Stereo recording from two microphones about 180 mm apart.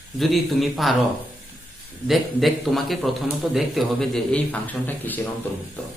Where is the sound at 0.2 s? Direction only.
Centre (ahead or behind).